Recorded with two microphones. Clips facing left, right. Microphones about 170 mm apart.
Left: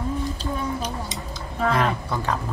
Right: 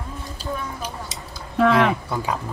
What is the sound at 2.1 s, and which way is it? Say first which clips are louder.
Speech: even; 10° right (ahead or behind).